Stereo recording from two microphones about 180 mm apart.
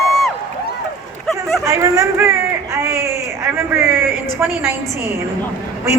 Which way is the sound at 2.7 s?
15° right (ahead or behind).